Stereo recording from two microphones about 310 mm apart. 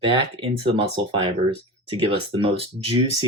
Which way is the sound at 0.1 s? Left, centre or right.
Centre.